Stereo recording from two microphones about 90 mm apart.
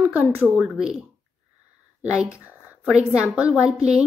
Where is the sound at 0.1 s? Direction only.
15° right (ahead or behind).